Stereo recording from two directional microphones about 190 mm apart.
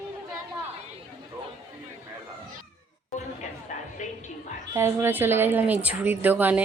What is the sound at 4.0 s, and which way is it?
Music, 40° left (ahead or behind).